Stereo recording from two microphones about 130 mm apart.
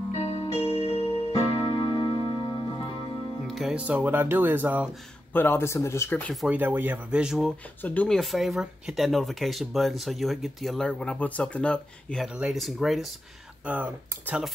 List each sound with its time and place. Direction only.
0.1 s music: 55° left (ahead or behind)
3.4 s speech: centre (ahead or behind)
5.3 s speech: 15° left (ahead or behind)
6.5 s speech: 15° right (ahead or behind)
7.8 s speech: 10° left (ahead or behind)
8.2 s speech: centre (ahead or behind)
13.7 s speech: 10° right (ahead or behind)